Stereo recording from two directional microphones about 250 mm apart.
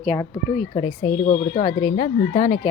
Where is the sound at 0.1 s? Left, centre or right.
Centre.